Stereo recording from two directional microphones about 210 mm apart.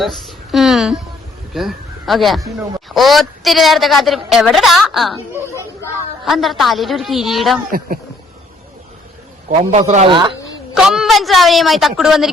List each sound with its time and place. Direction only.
0.0 s a woman's voice: centre (ahead or behind)
6.2 s a woman's voice: centre (ahead or behind)
9.5 s a man's voice: 35° right (ahead or behind)
10.8 s a woman's voice: 5° right (ahead or behind)